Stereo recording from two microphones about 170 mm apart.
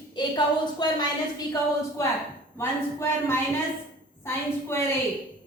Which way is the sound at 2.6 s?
15° left (ahead or behind).